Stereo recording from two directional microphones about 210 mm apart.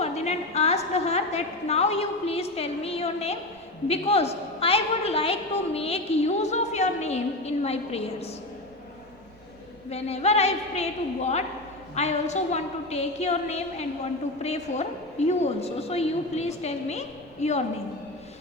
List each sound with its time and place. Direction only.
0.0 s a woman's voice: 30° left (ahead or behind)
9.9 s a woman's voice: 30° left (ahead or behind)